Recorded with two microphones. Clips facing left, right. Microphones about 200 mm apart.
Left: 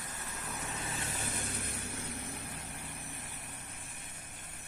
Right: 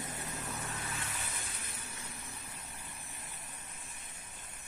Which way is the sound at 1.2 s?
60° left (ahead or behind).